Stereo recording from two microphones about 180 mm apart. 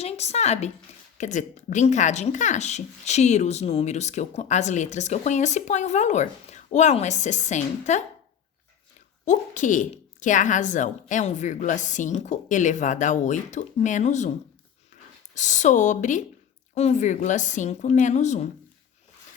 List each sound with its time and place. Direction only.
0.0 s speech: 35° left (ahead or behind)
9.2 s a woman's voice: 45° left (ahead or behind)
15.4 s a woman's voice: 40° left (ahead or behind)